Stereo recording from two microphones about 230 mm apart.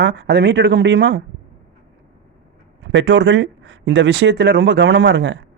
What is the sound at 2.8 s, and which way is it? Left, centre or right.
A man's voice, right.